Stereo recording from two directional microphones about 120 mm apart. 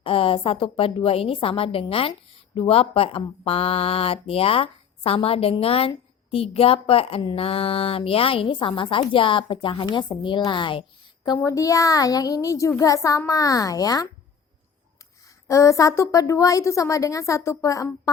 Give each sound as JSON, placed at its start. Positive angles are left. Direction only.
{"t": 0.0, "sound": "speech", "side_deg": 50}
{"t": 11.4, "sound": "a woman's voice", "side_deg": 30}
{"t": 15.4, "sound": "a woman's voice", "side_deg": 25}